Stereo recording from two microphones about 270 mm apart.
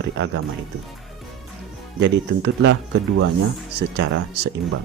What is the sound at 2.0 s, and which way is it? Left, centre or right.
Speech, right.